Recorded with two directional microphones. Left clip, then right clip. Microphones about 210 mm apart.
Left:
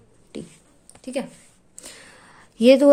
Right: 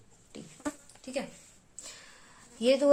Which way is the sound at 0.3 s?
45° left (ahead or behind).